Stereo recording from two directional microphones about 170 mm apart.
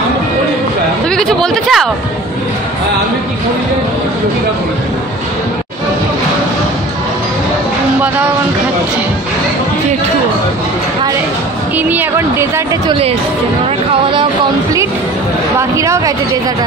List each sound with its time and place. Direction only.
1.1 s speech: 5° left (ahead or behind)
11.7 s a woman's voice: 10° right (ahead or behind)
15.7 s a woman's voice: 15° right (ahead or behind)